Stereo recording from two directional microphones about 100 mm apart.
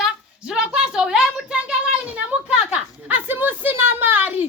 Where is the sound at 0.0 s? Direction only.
5° right (ahead or behind).